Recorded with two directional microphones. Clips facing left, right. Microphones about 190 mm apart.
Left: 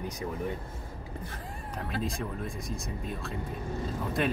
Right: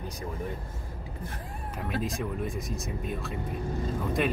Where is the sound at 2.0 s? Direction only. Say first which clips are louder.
Right 3 dB; centre (ahead or behind).